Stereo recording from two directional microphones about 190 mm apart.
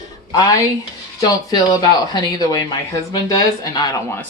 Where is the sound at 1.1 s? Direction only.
20° left (ahead or behind).